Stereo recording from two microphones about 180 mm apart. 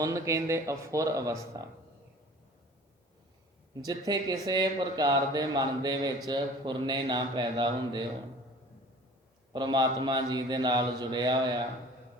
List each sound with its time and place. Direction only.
0.0 s speech: 15° right (ahead or behind)
3.8 s speech: 20° right (ahead or behind)
9.5 s speech: 25° right (ahead or behind)